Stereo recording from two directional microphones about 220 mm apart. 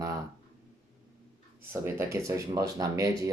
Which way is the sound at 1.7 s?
10° right (ahead or behind).